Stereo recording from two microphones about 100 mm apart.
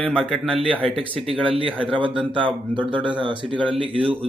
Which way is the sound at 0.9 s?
70° right (ahead or behind).